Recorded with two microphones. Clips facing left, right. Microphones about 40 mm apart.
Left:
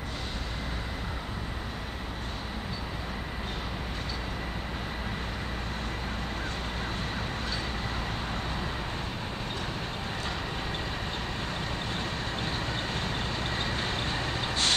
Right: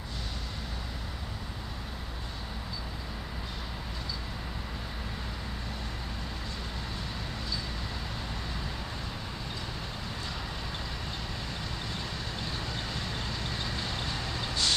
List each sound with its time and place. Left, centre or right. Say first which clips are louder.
11.9 s vehicle: left 4 dB; left